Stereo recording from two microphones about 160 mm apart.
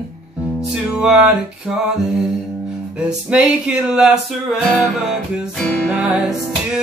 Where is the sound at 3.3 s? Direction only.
5° right (ahead or behind).